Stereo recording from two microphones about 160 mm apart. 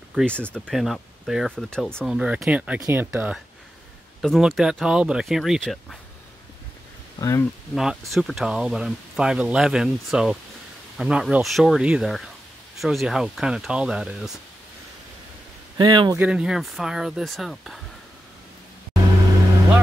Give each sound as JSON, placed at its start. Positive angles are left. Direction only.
{"t": 0.1, "sound": "speech", "side_deg": 5}
{"t": 4.2, "sound": "speech", "side_deg": 0}
{"t": 7.2, "sound": "speech", "side_deg": 20}
{"t": 7.7, "sound": "speech", "side_deg": -5}
{"t": 15.8, "sound": "speech", "side_deg": -25}
{"t": 16.2, "sound": "speech", "side_deg": -5}